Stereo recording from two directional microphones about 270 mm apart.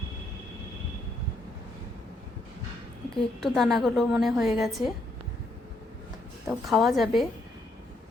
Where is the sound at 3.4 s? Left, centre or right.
Centre.